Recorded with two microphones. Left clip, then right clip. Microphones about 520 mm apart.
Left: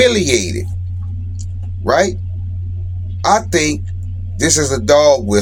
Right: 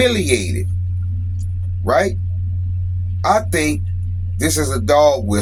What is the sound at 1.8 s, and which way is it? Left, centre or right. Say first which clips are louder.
Speech: left 2 dB; right.